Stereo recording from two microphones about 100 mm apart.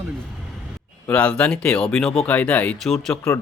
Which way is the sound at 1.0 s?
15° left (ahead or behind).